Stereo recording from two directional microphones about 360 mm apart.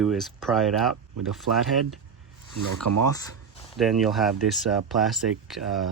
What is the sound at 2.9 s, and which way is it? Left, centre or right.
Speech, right.